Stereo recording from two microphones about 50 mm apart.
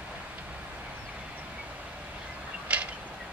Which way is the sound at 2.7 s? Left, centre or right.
Right.